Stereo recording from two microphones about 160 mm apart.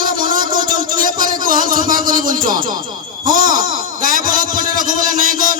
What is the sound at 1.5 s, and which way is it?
Music, 60° right (ahead or behind).